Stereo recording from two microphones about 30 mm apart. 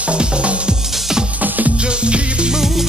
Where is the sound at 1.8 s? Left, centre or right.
Right.